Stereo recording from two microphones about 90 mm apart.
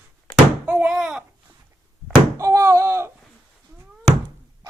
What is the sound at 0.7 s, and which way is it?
Thunk, 15° right (ahead or behind).